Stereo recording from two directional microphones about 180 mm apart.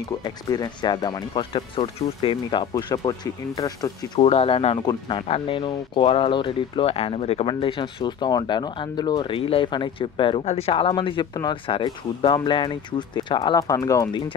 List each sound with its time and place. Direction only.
0.2 s speech: 20° left (ahead or behind)
4.2 s speech: 35° left (ahead or behind)